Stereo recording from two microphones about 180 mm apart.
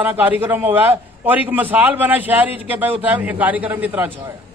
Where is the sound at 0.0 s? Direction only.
10° right (ahead or behind).